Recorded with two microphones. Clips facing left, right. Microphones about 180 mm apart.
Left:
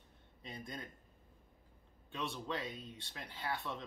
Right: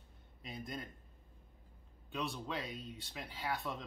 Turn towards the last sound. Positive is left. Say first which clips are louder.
# right 1 dB
turn(degrees=0)  # may be behind; listen again after turning